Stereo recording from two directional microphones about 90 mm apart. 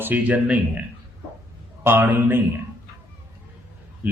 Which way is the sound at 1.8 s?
25° right (ahead or behind).